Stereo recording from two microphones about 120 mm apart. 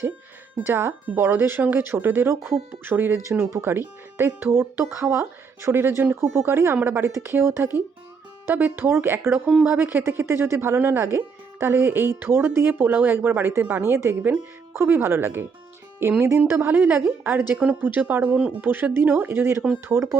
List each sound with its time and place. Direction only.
0.7 s speech: 20° right (ahead or behind)